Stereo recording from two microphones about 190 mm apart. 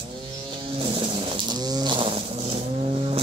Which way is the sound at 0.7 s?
25° right (ahead or behind).